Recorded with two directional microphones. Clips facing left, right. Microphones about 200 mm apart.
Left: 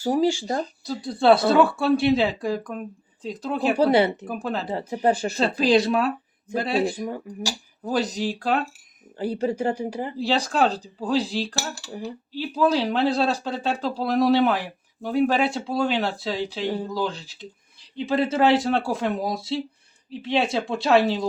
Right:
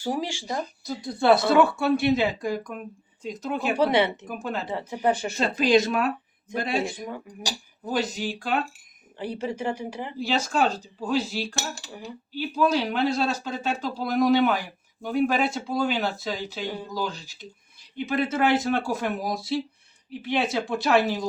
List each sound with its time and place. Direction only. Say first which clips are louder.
0.0 s speech: left 8 dB; 35° left (ahead or behind)
11.5 s cutlery: left 2 dB; 20° right (ahead or behind)
11.9 s speech: left 4 dB; 30° left (ahead or behind)